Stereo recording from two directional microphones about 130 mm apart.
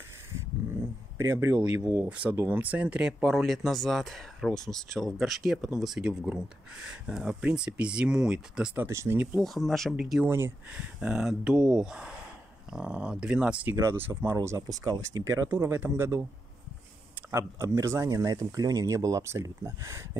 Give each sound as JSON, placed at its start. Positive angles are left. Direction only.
{"t": 0.3, "sound": "a sound", "side_deg": -20}
{"t": 2.0, "sound": "speech", "side_deg": -10}
{"t": 8.8, "sound": "speech", "side_deg": -20}
{"t": 9.4, "sound": "speech", "side_deg": 0}
{"t": 10.2, "sound": "speech", "side_deg": -15}
{"t": 17.3, "sound": "speech", "side_deg": -20}